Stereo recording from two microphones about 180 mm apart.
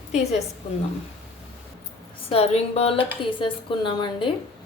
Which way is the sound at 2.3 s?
35° left (ahead or behind).